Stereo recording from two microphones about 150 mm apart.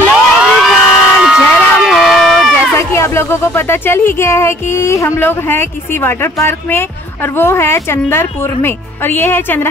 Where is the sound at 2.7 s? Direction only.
20° left (ahead or behind).